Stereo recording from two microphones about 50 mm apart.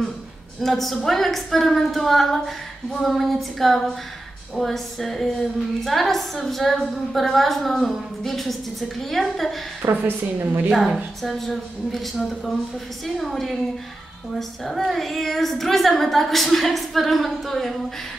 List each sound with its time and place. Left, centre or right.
0.6 s a woman's voice: centre
9.8 s a woman's voice: right
10.7 s a woman's voice: centre
14.6 s a woman's voice: centre